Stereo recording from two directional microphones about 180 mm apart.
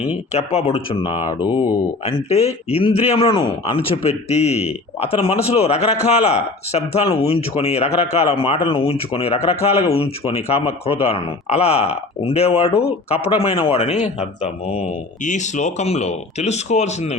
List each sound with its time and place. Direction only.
0.3 s a man's voice: 30° left (ahead or behind)
2.0 s a man's voice: 35° left (ahead or behind)